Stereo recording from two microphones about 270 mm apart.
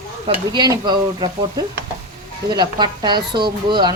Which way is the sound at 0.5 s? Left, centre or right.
Centre.